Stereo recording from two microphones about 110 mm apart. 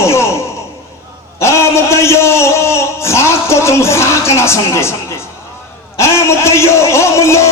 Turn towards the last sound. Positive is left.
turn(degrees=25)  # may be behind; listen again after turning